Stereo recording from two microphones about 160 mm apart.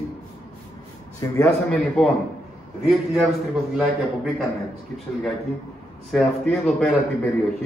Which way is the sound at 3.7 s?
Centre (ahead or behind).